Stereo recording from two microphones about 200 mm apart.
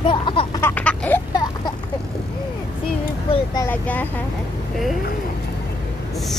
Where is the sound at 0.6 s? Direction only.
10° left (ahead or behind).